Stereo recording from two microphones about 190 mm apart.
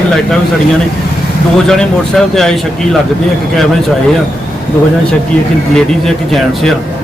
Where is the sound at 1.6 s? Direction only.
5° left (ahead or behind).